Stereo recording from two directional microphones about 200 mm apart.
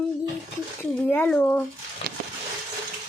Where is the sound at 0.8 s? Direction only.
10° left (ahead or behind).